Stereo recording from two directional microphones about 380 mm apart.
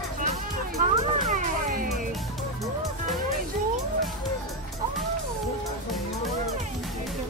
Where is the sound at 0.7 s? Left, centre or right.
Centre.